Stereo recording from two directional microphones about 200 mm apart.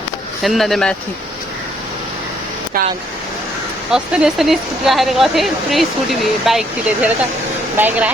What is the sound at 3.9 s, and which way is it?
A woman's voice, 5° right (ahead or behind).